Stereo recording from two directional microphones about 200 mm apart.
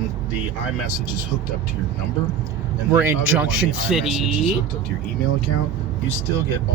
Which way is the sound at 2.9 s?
10° right (ahead or behind).